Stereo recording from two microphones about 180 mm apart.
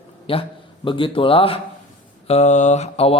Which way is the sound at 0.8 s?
30° left (ahead or behind).